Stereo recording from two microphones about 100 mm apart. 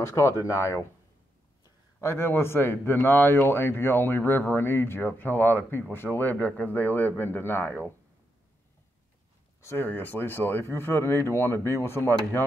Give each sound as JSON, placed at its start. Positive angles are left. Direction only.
{"t": 0.0, "sound": "speech", "side_deg": 30}
{"t": 2.0, "sound": "a man's voice", "side_deg": 25}
{"t": 9.6, "sound": "a man's voice", "side_deg": 20}